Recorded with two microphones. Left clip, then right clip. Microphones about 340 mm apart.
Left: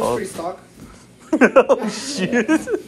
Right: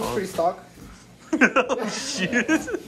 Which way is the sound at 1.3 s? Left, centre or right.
Centre.